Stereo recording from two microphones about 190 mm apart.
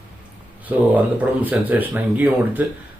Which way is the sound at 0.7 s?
10° right (ahead or behind).